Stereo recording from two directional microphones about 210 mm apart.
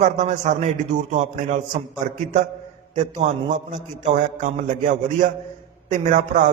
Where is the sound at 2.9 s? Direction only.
35° right (ahead or behind).